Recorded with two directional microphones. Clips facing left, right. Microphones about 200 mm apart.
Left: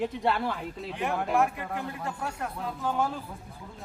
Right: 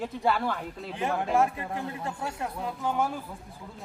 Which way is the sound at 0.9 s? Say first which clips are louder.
Right 1 dB; 30° right (ahead or behind).